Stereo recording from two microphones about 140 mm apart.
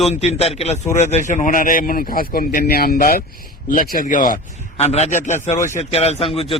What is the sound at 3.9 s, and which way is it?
Speech, 80° left.